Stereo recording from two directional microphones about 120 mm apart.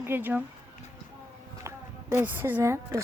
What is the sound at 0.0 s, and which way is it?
Speech, 15° right (ahead or behind).